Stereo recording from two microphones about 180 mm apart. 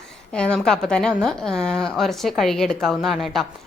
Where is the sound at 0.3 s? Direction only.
5° left (ahead or behind).